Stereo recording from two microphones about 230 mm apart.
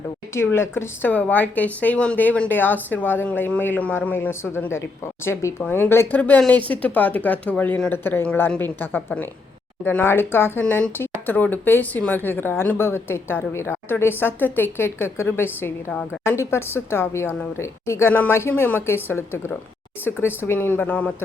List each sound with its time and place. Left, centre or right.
0.3 s speech: centre